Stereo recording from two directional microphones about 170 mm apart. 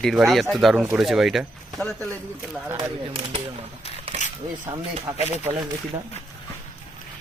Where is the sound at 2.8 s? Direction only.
30° right (ahead or behind).